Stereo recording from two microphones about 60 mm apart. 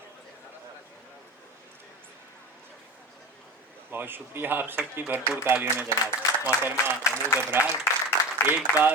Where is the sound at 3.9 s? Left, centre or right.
Right.